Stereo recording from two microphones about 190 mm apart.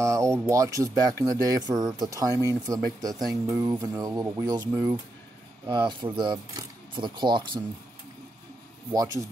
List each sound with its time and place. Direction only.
0.0 s speech: 15° right (ahead or behind)